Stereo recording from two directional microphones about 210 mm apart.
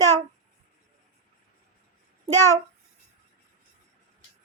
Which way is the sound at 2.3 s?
10° left (ahead or behind).